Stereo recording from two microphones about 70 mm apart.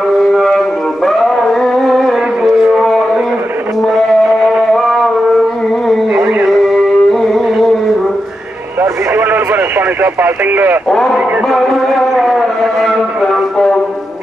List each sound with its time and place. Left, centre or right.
0.3 s music: centre
3.8 s music: centre
4.7 s a sound: centre
6.5 s music: centre
8.8 s radio: right
10.9 s a man's voice: centre
11.4 s a sound: centre
13.2 s music: centre